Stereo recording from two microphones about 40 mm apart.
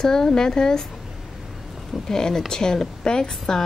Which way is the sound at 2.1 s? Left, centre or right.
Centre.